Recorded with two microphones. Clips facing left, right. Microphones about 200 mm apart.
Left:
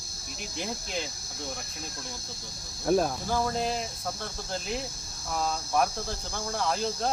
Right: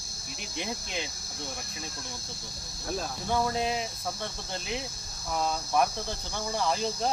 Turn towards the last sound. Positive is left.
turn(degrees=0)  # may be behind; listen again after turning